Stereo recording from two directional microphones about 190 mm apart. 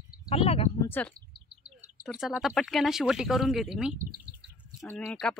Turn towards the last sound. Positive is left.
turn(degrees=5)  # may be behind; listen again after turning